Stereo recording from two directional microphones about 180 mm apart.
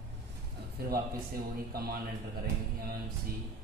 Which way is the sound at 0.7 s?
55° right (ahead or behind).